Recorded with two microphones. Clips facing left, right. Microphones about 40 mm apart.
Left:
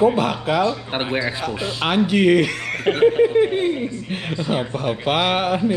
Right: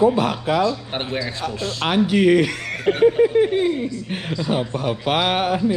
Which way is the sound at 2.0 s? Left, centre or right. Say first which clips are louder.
Even; left.